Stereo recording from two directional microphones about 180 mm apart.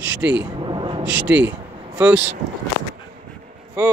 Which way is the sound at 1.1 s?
10° right (ahead or behind).